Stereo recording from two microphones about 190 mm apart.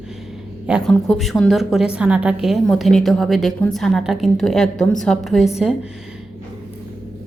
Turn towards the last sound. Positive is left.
turn(degrees=0)  # may be behind; listen again after turning